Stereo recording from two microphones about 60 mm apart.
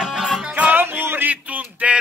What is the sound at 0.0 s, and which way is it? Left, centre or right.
Music, centre.